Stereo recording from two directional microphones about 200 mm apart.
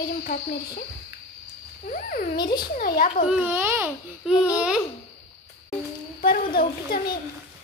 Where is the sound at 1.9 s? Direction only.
45° left (ahead or behind).